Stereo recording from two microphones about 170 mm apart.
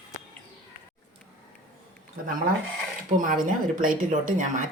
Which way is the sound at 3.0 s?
50° right (ahead or behind).